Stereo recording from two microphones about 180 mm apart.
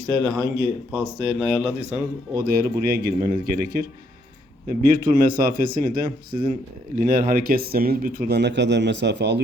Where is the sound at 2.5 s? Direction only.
55° right (ahead or behind).